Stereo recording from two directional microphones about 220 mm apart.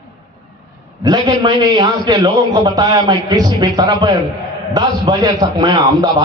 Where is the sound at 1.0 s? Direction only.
15° right (ahead or behind).